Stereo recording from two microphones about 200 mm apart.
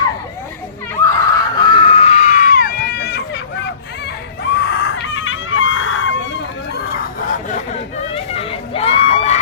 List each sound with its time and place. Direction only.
0.9 s screaming: 15° left (ahead or behind); by 3.4 s 55° left (ahead or behind)
4.6 s screaming: 55° left (ahead or behind); by 6.1 s 70° left (ahead or behind)
7.3 s a sound: 35° left (ahead or behind)